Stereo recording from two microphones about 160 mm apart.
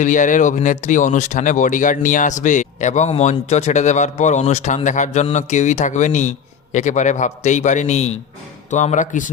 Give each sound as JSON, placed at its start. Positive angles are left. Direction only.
{"t": 0.0, "sound": "speech", "side_deg": 55}